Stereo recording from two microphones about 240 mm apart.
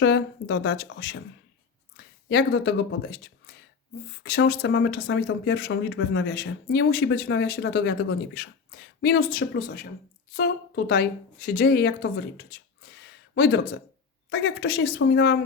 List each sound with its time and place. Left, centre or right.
0.0 s speech: left
2.3 s a woman's voice: left